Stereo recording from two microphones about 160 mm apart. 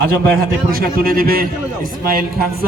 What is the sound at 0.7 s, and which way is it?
Speech, 70° right (ahead or behind).